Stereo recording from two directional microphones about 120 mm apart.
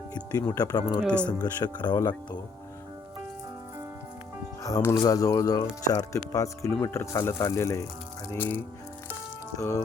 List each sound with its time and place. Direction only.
0.1 s speech: 35° left (ahead or behind)
4.6 s speech: 25° left (ahead or behind)
9.6 s speech: 25° left (ahead or behind)